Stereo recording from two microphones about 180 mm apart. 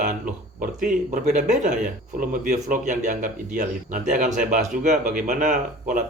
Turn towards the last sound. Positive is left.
turn(degrees=-45)  # may be behind; listen again after turning